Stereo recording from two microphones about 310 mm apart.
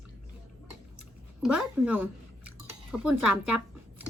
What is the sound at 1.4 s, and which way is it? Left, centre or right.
Speech, centre.